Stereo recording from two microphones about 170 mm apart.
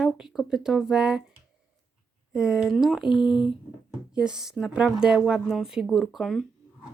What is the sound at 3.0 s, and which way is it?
Speech, 30° left (ahead or behind).